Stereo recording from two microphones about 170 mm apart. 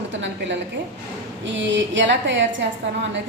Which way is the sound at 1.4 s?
90° right.